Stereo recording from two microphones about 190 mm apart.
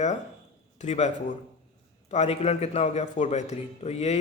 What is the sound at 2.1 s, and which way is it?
A man's voice, 35° left (ahead or behind).